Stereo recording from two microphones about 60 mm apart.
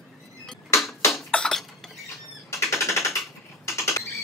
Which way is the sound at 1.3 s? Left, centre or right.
Centre.